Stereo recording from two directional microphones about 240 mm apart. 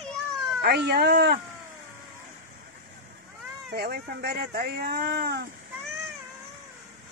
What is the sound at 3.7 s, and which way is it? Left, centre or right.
Speech, right.